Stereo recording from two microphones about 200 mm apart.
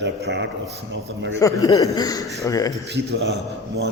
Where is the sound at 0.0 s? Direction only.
60° right (ahead or behind).